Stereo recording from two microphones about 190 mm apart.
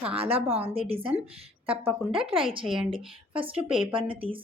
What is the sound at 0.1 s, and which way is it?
Speech, 30° right (ahead or behind).